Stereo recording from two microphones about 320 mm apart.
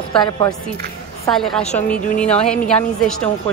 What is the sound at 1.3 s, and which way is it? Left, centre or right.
Speech, centre.